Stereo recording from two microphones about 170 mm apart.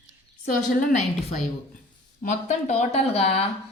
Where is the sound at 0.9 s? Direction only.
40° left (ahead or behind).